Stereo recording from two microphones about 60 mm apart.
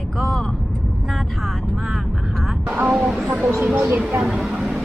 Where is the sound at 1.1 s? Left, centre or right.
Centre.